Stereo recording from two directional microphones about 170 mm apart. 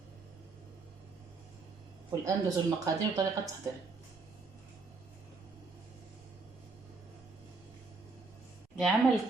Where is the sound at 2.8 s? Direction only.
20° right (ahead or behind).